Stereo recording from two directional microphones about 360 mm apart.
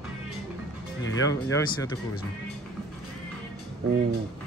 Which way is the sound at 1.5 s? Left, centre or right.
Centre.